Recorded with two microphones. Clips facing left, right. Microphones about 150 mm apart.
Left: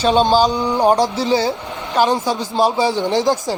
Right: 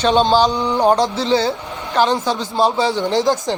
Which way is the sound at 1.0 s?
20° right (ahead or behind).